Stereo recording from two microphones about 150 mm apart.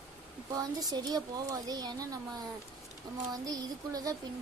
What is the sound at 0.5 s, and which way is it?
A woman's voice, 25° right (ahead or behind).